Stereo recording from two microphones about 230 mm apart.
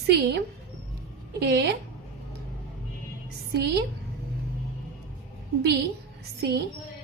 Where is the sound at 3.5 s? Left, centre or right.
Right.